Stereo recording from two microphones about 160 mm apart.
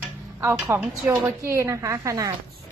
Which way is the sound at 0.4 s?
15° right (ahead or behind).